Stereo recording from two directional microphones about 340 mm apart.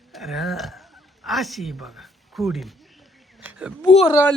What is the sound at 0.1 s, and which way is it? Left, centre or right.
Speech, centre.